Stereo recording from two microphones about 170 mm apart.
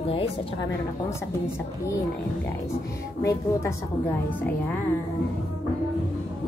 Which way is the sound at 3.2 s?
15° left (ahead or behind).